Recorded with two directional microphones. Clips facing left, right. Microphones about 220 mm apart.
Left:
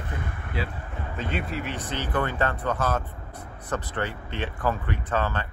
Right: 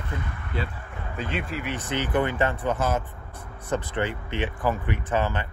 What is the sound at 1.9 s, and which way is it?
Speech, 20° right (ahead or behind).